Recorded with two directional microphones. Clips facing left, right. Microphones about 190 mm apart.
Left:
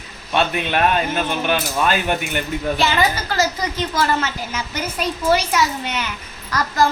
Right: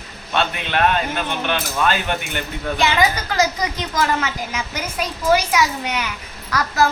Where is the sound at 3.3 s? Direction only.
15° right (ahead or behind).